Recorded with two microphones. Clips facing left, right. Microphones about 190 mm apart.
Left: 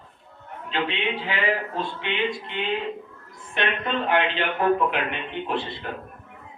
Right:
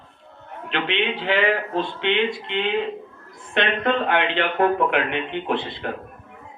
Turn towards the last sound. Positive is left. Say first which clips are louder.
# right 3 dB
turn(degrees=-60)  # may be behind; listen again after turning